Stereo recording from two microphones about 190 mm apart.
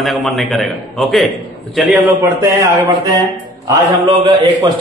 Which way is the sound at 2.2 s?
15° right (ahead or behind).